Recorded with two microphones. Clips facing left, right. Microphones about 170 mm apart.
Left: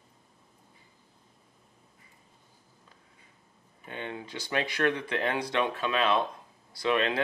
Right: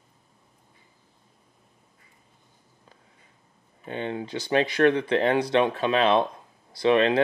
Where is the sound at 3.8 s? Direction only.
30° right (ahead or behind).